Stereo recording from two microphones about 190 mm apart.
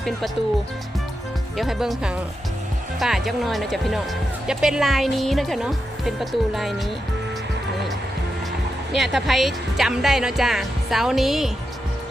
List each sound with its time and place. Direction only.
1.5 s speech: centre (ahead or behind)
8.9 s speech: centre (ahead or behind)